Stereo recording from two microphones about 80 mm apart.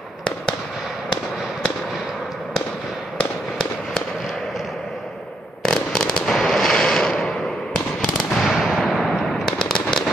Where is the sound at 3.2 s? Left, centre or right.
Centre.